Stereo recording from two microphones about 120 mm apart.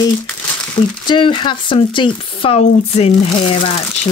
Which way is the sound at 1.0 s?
40° left (ahead or behind).